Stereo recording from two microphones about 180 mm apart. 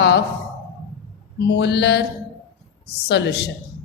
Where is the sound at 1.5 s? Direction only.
70° left (ahead or behind).